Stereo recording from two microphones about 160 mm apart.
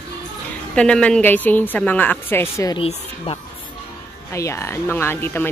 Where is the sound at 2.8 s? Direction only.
35° left (ahead or behind).